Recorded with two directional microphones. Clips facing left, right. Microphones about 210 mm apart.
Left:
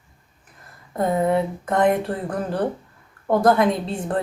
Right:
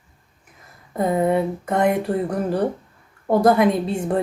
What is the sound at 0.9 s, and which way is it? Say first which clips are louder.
Speech: right 1 dB; 5° right (ahead or behind).